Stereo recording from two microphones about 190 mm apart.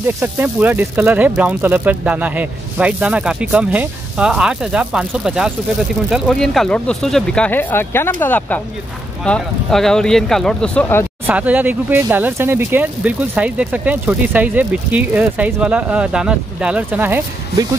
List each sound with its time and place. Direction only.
0.0 s speech: 10° right (ahead or behind); by 11.1 s 10° left (ahead or behind)
11.2 s speech: 10° right (ahead or behind)